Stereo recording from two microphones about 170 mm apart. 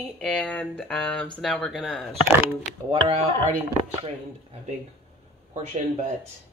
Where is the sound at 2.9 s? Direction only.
35° right (ahead or behind).